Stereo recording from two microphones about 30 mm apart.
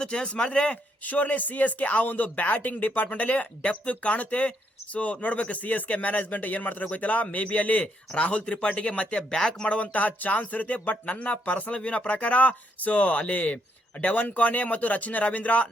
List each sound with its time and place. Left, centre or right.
0.0 s speech: left
1.0 s speech: left
3.8 s speech: left
7.3 s speech: left
8.1 s speech: left
9.4 s speech: left
9.6 s speech: left
11.8 s speech: left
14.0 s speech: left